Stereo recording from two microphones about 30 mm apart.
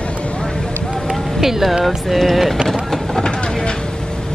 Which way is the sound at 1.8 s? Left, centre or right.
Centre.